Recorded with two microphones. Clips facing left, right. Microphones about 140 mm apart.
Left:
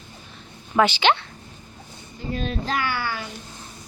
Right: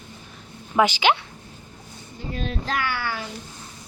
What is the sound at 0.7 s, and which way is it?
Speech, 10° right (ahead or behind).